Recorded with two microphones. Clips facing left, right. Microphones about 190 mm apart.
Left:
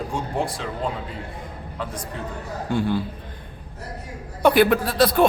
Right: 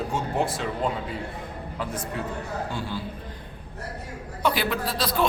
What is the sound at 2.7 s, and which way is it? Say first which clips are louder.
Speech: left 9 dB; 55° left (ahead or behind).